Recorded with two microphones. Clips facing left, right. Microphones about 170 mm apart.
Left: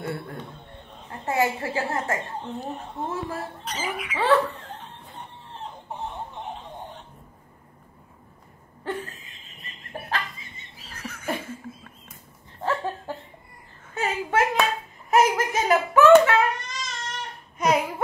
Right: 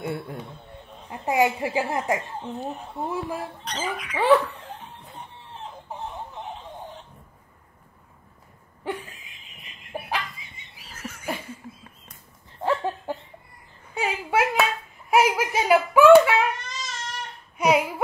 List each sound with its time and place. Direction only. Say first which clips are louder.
0.0 s a man's voice: right 1 dB; 20° right (ahead or behind)
2.4 s speech: right 1 dB; centre (ahead or behind)
3.1 s a woman's voice: right 2 dB; 15° right (ahead or behind)
3.6 s speech: right 1 dB; 5° left (ahead or behind)
5.1 s chicken: even; centre (ahead or behind)
8.8 s a sound: even; 10° right (ahead or behind)
12.6 s a sound: right 2 dB; 15° right (ahead or behind)